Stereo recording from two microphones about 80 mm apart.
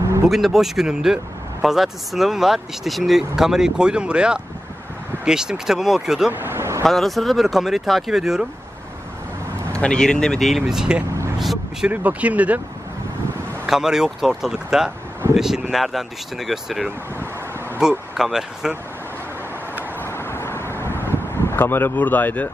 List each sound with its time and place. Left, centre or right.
0.3 s speech: centre
6.3 s vehicle: right
6.8 s speech: centre
9.7 s speech: centre
11.3 s vehicle: centre
11.9 s speech: centre
13.7 s speech: centre
20.0 s vehicle: left